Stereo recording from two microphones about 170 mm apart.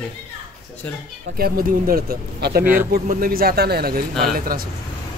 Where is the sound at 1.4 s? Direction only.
60° right (ahead or behind).